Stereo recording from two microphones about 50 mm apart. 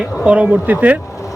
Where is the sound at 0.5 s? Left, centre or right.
Right.